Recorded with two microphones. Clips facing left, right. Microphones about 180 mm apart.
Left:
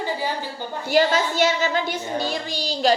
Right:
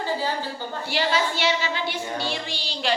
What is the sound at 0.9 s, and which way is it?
A woman's voice, 45° left (ahead or behind).